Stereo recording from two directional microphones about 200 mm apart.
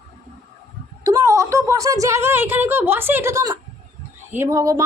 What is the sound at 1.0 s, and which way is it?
A woman's voice, 15° right (ahead or behind).